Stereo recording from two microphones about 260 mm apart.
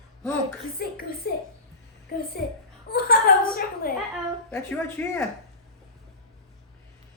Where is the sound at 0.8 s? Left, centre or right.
Left.